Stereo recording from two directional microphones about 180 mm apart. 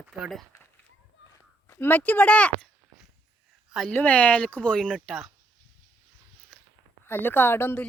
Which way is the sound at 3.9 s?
10° left (ahead or behind).